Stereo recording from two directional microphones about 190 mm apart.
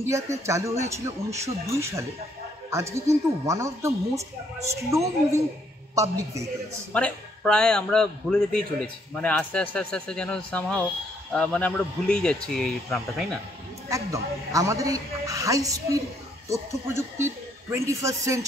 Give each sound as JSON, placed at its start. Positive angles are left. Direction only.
{"t": 0.0, "sound": "a man's voice", "side_deg": -15}
{"t": 6.9, "sound": "speech", "side_deg": 5}
{"t": 13.8, "sound": "a man's voice", "side_deg": -15}